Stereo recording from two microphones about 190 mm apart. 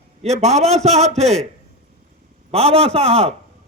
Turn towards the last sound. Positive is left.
turn(degrees=-35)  # may be behind; listen again after turning